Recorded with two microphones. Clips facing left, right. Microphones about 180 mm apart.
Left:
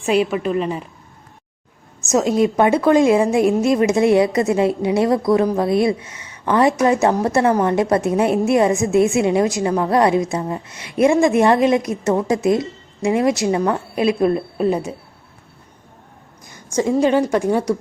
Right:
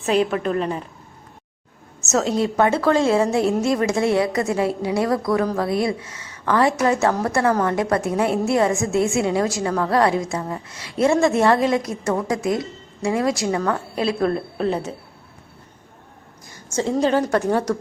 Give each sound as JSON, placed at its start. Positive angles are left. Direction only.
{"t": 0.0, "sound": "a woman's voice", "side_deg": 10}
{"t": 2.0, "sound": "a woman's voice", "side_deg": 15}
{"t": 16.7, "sound": "a woman's voice", "side_deg": 15}